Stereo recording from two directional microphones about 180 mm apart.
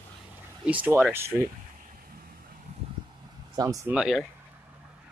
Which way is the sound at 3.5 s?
15° right (ahead or behind).